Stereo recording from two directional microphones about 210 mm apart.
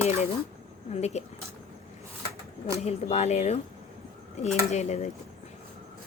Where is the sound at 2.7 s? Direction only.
30° left (ahead or behind).